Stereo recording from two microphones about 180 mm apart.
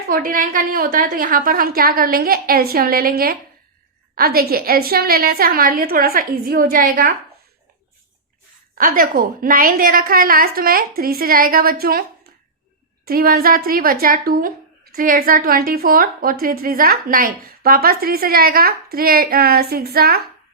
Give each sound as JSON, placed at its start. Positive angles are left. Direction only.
{"t": 0.1, "sound": "a woman's voice", "side_deg": -50}
{"t": 8.8, "sound": "a woman's voice", "side_deg": -50}
{"t": 13.1, "sound": "a woman's voice", "side_deg": -55}